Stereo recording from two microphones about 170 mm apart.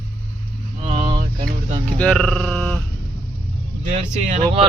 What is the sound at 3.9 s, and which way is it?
Speech, 40° right (ahead or behind).